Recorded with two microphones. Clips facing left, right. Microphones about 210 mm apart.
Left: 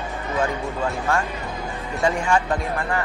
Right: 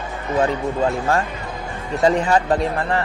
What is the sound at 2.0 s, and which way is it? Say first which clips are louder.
Speech: right 4 dB; 35° right (ahead or behind).